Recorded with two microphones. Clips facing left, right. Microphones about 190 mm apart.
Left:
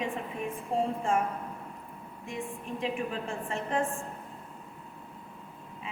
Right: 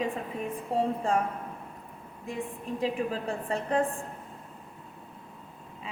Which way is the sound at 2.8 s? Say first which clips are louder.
Right 3 dB; 40° right (ahead or behind).